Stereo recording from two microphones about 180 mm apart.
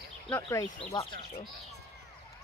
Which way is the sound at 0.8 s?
25° left (ahead or behind).